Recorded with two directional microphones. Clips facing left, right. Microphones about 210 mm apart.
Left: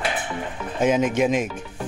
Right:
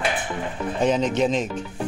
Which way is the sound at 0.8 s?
10° left (ahead or behind).